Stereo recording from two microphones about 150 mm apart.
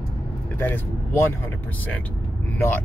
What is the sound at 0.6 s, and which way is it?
Speech, 15° left (ahead or behind).